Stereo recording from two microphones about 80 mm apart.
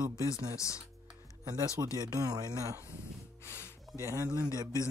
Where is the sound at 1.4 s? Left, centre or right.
Right.